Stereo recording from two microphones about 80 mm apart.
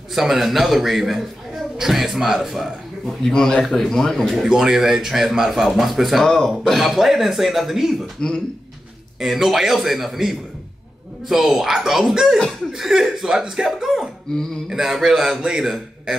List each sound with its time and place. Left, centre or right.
0.1 s a man's voice: centre
8.2 s speech: centre
9.2 s a man's voice: centre